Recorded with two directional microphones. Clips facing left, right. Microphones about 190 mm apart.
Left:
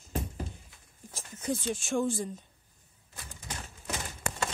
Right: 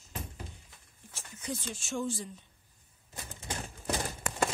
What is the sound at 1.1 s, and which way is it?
Speech, 40° left (ahead or behind).